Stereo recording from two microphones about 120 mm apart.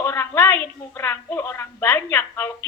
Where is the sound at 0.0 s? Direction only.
20° left (ahead or behind).